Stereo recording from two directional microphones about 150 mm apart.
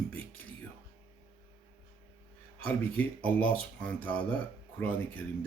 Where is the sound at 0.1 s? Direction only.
10° left (ahead or behind).